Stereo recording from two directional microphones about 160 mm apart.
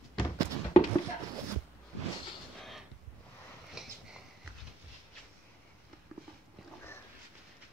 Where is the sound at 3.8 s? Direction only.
5° right (ahead or behind).